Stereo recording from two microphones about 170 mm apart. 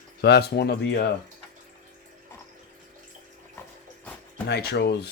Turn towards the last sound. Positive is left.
turn(degrees=75)  # may be behind; listen again after turning